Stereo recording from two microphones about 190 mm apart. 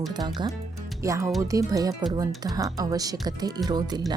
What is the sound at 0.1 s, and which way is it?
Speech, 20° right (ahead or behind).